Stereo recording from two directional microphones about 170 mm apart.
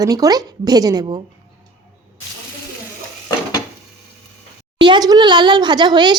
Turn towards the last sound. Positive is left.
turn(degrees=-25)  # may be behind; listen again after turning